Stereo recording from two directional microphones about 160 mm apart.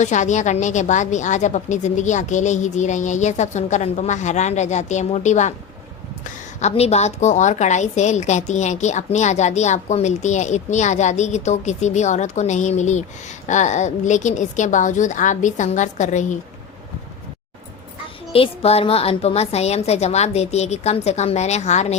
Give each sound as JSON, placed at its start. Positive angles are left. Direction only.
{"t": 0.0, "sound": "a woman's voice", "side_deg": 50}
{"t": 6.6, "sound": "a woman's voice", "side_deg": 40}
{"t": 18.3, "sound": "a woman's voice", "side_deg": 35}